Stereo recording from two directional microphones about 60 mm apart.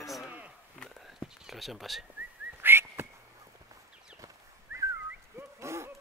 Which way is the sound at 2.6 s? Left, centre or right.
Right.